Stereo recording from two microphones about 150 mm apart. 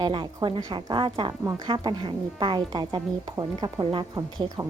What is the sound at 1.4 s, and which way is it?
A woman's voice, 20° right (ahead or behind).